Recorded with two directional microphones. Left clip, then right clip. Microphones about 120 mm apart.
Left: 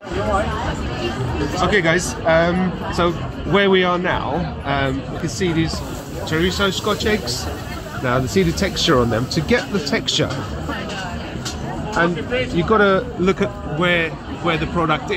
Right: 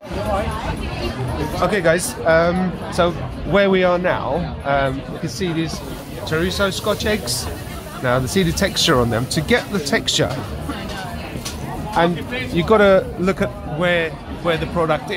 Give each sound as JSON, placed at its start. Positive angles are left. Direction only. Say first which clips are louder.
{"t": 1.7, "sound": "a man's voice", "louder": "even", "side_deg": -40}
{"t": 6.3, "sound": "speech", "louder": "left 1 dB", "side_deg": -55}
{"t": 12.5, "sound": "speech", "louder": "right 3 dB", "side_deg": -90}
{"t": 13.2, "sound": "a man's voice", "louder": "left 1 dB", "side_deg": -35}